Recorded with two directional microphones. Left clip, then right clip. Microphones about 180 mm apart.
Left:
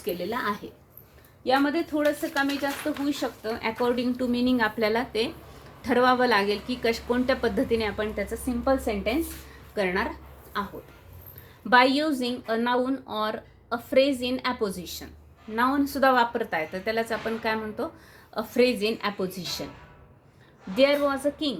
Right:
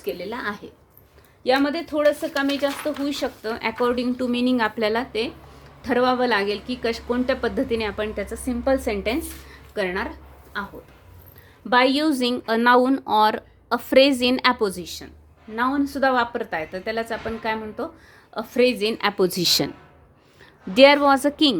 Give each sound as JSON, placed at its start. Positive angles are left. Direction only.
{"t": 0.0, "sound": "a woman's voice", "side_deg": -15}
{"t": 1.5, "sound": "a woman's voice", "side_deg": -55}
{"t": 3.1, "sound": "a woman's voice", "side_deg": -50}
{"t": 9.7, "sound": "a woman's voice", "side_deg": -20}
{"t": 11.9, "sound": "a woman's voice", "side_deg": -45}
{"t": 15.5, "sound": "a woman's voice", "side_deg": -5}
{"t": 19.2, "sound": "a woman's voice", "side_deg": -65}
{"t": 20.7, "sound": "a woman's voice", "side_deg": -60}